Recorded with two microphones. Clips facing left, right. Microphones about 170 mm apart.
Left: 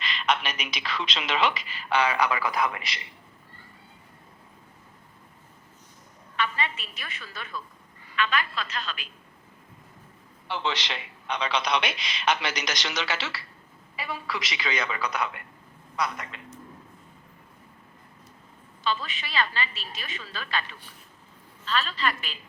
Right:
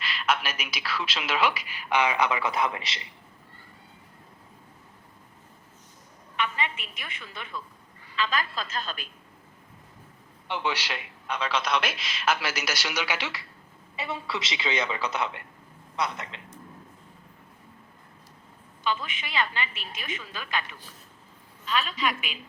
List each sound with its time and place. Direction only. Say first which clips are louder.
0.0 s a woman's voice: left 1 dB; 5° right (ahead or behind); by 3.0 s 25° right (ahead or behind)
6.3 s a woman's voice: left 1 dB; 15° right (ahead or behind)
10.5 s a man's voice: even; 10° right (ahead or behind)
13.9 s a woman's voice: right 1 dB; 25° right (ahead or behind)
18.8 s a woman's voice: even; 15° right (ahead or behind)